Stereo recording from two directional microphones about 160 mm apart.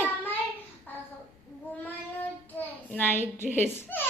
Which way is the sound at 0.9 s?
10° left (ahead or behind).